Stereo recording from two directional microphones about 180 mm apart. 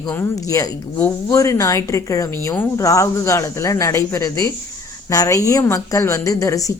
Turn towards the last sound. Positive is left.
turn(degrees=20)  # may be behind; listen again after turning